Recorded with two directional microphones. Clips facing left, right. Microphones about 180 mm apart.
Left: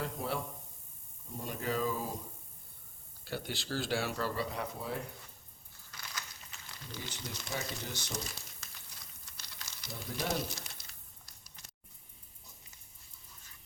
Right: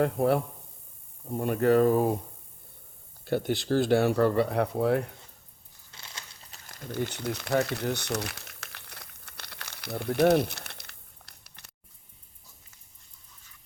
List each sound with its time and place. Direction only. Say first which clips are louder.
0.0 s speech: right 13 dB; 60° right (ahead or behind)
3.2 s speech: right 12 dB; 55° right (ahead or behind)
5.9 s crunch: left 1 dB; 25° right (ahead or behind)
6.6 s crumpling: right 14 dB; 50° right (ahead or behind); by 11.7 s 65° right (ahead or behind)